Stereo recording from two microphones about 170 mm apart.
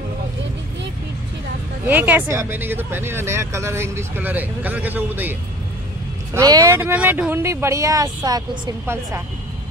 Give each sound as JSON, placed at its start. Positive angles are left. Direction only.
{"t": 1.9, "sound": "speech", "side_deg": -10}
{"t": 6.3, "sound": "speech", "side_deg": -20}